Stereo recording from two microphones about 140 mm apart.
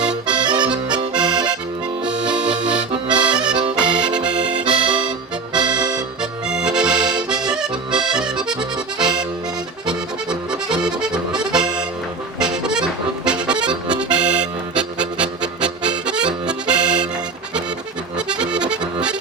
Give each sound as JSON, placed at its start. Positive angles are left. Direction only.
{"t": 0.3, "sound": "accordion", "side_deg": -30}
{"t": 2.0, "sound": "music", "side_deg": -5}
{"t": 2.7, "sound": "accordion", "side_deg": -30}
{"t": 3.2, "sound": "accordion", "side_deg": -5}
{"t": 4.6, "sound": "accordion", "side_deg": -35}
{"t": 5.5, "sound": "music", "side_deg": -30}
{"t": 6.5, "sound": "accordion", "side_deg": -5}
{"t": 9.8, "sound": "accordion", "side_deg": -5}
{"t": 12.4, "sound": "music", "side_deg": -5}
{"t": 13.2, "sound": "accordion", "side_deg": -5}
{"t": 14.1, "sound": "music", "side_deg": -10}
{"t": 18.3, "sound": "accordion", "side_deg": -5}